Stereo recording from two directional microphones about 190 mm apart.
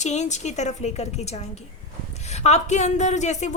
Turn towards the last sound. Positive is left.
turn(degrees=40)  # may be behind; listen again after turning